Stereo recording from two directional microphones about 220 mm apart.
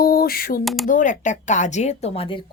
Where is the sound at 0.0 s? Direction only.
40° left (ahead or behind).